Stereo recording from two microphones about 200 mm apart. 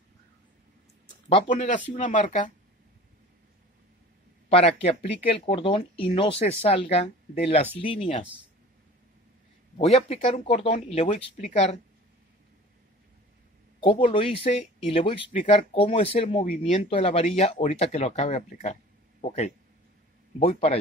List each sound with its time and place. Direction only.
1.5 s speech: 40° left (ahead or behind)
4.5 s a man's voice: 30° left (ahead or behind)
9.8 s speech: 30° left (ahead or behind)
13.7 s speech: 25° left (ahead or behind)